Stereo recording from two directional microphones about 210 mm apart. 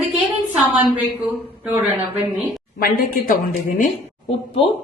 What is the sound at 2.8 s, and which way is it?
A woman's voice, 45° left (ahead or behind).